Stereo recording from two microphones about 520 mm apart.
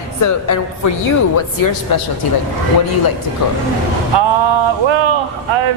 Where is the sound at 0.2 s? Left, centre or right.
Left.